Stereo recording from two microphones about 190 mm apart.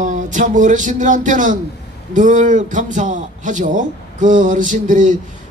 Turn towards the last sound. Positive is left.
turn(degrees=-40)  # may be behind; listen again after turning